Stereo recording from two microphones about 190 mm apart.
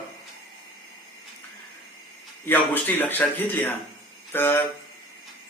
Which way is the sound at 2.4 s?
10° left (ahead or behind).